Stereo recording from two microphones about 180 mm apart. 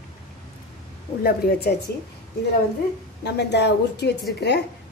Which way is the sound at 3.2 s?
70° left (ahead or behind).